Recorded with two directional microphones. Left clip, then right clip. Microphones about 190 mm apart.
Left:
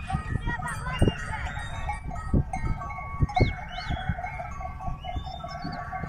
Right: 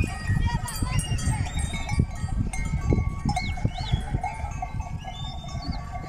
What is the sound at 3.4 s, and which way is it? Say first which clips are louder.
Livestock: left 3 dB; 50° right (ahead or behind).